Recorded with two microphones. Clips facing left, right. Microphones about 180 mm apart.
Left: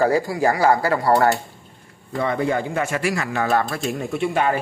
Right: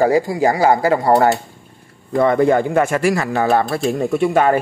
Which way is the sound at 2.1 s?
50° right (ahead or behind).